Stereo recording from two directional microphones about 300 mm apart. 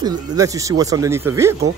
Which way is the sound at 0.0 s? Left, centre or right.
Centre.